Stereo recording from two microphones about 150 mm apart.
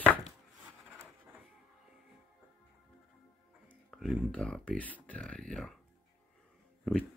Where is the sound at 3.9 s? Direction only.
Centre (ahead or behind).